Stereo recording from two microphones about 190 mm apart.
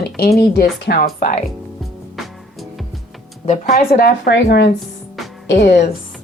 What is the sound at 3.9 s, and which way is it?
A woman's voice, 55° left (ahead or behind).